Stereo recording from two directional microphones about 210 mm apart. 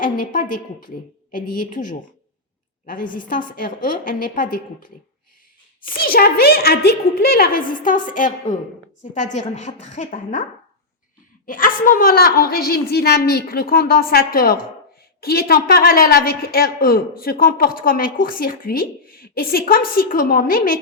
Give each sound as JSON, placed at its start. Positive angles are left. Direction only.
{"t": 0.0, "sound": "a woman's voice", "side_deg": 40}
{"t": 3.1, "sound": "a woman's voice", "side_deg": 40}
{"t": 6.0, "sound": "a woman's voice", "side_deg": 45}
{"t": 11.4, "sound": "a woman's voice", "side_deg": 40}